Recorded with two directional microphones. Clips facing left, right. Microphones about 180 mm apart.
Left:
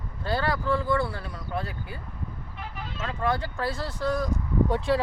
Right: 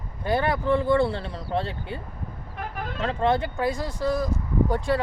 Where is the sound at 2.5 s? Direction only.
50° right (ahead or behind).